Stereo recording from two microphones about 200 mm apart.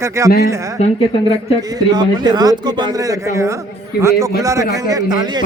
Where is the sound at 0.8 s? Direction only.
30° left (ahead or behind).